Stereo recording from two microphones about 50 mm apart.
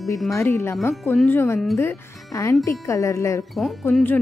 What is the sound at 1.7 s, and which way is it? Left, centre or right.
Speech, left.